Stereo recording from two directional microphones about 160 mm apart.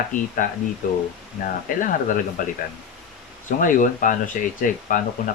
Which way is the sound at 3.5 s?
55° left (ahead or behind).